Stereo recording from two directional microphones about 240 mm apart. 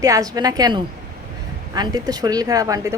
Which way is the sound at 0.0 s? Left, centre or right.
Centre.